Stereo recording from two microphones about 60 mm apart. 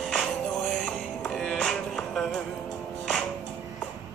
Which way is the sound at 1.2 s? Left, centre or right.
Centre.